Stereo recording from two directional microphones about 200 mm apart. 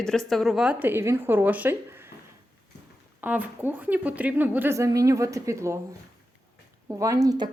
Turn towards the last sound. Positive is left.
turn(degrees=-15)  # may be behind; listen again after turning